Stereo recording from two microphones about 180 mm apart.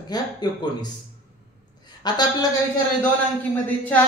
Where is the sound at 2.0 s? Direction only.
25° left (ahead or behind).